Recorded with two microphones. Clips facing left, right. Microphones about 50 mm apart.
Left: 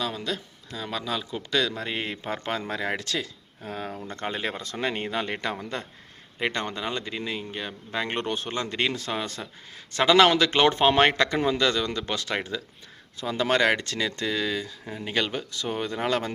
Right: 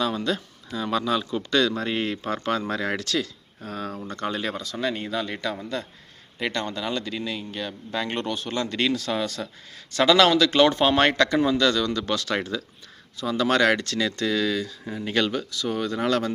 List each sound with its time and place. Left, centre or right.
0.0 s speech: centre
15.3 s speech: left